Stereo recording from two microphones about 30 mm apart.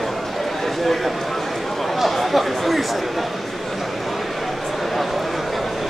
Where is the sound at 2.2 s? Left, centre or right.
Centre.